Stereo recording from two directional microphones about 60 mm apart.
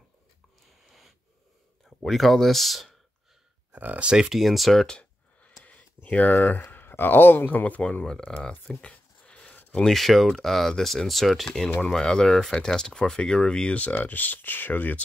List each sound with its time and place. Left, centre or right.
0.8 s a sound: centre
1.9 s speech: centre
3.7 s speech: right
4.3 s speech: centre
4.8 s a sound: centre
5.6 s speech: left
8.0 s speech: centre
9.5 s a sound: left
9.8 s speech: centre; by 15.0 s left